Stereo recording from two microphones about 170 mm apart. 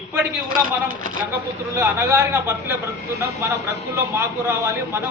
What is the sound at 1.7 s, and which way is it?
A man's voice, 15° right (ahead or behind).